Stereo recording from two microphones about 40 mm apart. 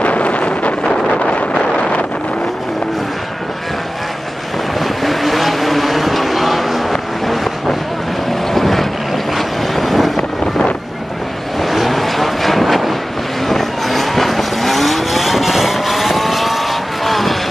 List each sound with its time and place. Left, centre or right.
0.0 s wind noise: left
4.7 s vehicle: centre
8.5 s boat: centre
9.8 s vehicle: centre
11.6 s vehicle: centre